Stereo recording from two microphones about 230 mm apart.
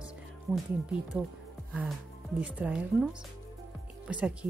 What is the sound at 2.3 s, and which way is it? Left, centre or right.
Speech, centre.